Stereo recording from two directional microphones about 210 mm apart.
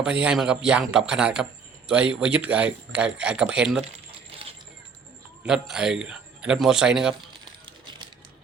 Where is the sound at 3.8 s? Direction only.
30° right (ahead or behind).